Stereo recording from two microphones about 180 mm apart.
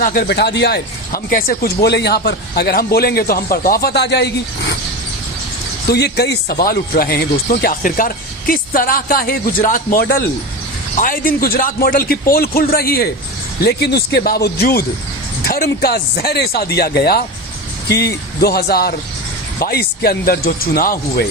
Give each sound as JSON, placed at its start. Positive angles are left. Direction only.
{"t": 0.0, "sound": "speech", "side_deg": 55}
{"t": 5.9, "sound": "speech", "side_deg": 65}